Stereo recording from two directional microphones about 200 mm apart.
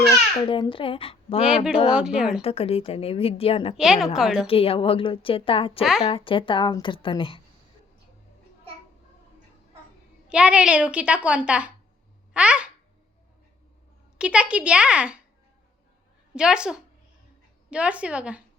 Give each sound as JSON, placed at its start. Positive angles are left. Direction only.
{"t": 0.4, "sound": "a woman's voice", "side_deg": 25}
{"t": 1.5, "sound": "a woman's voice", "side_deg": -5}
{"t": 2.4, "sound": "a woman's voice", "side_deg": 30}
{"t": 3.8, "sound": "a woman's voice", "side_deg": -5}
{"t": 4.4, "sound": "a woman's voice", "side_deg": 30}
{"t": 5.8, "sound": "a woman's voice", "side_deg": 0}
{"t": 6.1, "sound": "a woman's voice", "side_deg": 25}
{"t": 10.2, "sound": "a woman's voice", "side_deg": -5}
{"t": 14.2, "sound": "a woman's voice", "side_deg": -5}
{"t": 16.3, "sound": "a woman's voice", "side_deg": -5}